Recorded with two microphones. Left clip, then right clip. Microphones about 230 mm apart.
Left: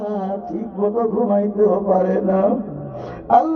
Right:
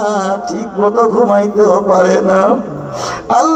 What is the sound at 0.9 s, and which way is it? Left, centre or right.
A man's voice, centre.